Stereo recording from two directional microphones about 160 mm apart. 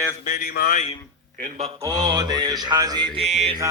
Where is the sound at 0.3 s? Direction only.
75° left (ahead or behind); by 0.9 s 50° left (ahead or behind).